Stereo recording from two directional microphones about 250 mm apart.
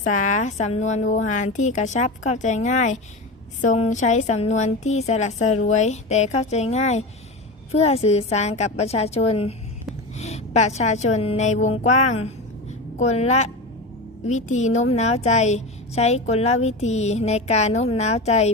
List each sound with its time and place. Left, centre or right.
0.1 s a woman's voice: left